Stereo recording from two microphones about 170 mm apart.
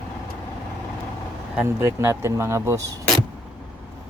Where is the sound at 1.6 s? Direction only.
15° right (ahead or behind).